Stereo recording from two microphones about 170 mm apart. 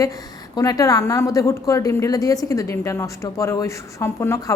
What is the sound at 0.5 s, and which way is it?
A woman's voice, 20° left (ahead or behind).